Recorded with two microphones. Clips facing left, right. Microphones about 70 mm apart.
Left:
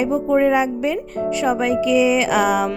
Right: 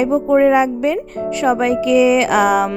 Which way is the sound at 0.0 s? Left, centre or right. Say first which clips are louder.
Right 4 dB; right.